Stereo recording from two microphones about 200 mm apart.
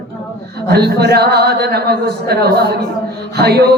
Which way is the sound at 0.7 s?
55° right (ahead or behind).